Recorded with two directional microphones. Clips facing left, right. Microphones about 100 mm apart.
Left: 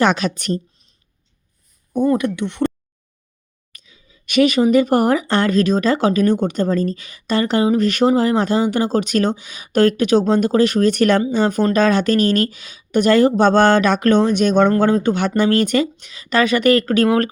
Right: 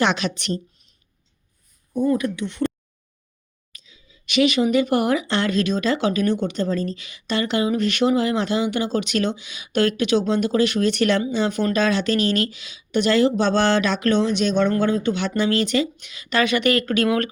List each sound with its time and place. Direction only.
0.0 s speech: 45° left (ahead or behind)
1.9 s speech: 70° left (ahead or behind)
3.7 s speech: 55° left (ahead or behind)
16.0 s speech: 35° left (ahead or behind)